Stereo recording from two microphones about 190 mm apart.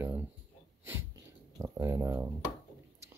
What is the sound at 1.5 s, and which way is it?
Speech, 15° right (ahead or behind).